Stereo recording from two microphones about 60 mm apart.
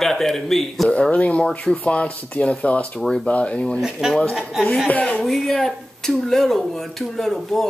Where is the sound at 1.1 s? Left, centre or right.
Left.